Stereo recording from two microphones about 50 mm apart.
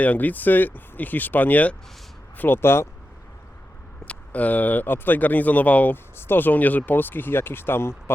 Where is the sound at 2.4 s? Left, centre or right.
Left.